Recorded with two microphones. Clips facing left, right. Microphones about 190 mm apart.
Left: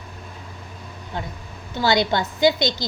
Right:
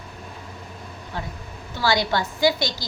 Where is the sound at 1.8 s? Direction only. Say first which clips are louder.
Left 2 dB; 20° left (ahead or behind).